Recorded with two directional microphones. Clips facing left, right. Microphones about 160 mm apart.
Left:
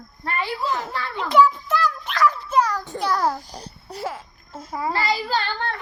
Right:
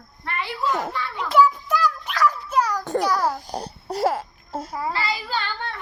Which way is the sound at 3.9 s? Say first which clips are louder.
Right 8 dB; 80° right.